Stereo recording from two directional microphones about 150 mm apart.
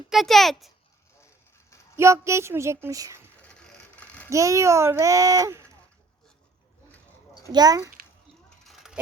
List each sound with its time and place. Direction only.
0.1 s a child's voice: centre (ahead or behind)
2.0 s a child's voice: 20° right (ahead or behind)
3.4 s mechanisms: 10° left (ahead or behind)
4.3 s a child's voice: 20° right (ahead or behind)
7.5 s a child's voice: 25° right (ahead or behind)
8.4 s a sound: centre (ahead or behind)